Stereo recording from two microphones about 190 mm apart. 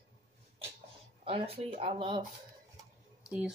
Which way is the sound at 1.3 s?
30° right (ahead or behind).